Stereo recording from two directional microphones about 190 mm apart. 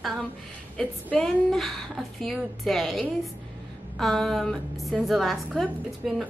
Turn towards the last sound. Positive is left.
turn(degrees=0)  # may be behind; listen again after turning